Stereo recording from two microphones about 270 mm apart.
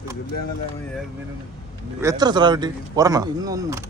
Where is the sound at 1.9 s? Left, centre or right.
Centre.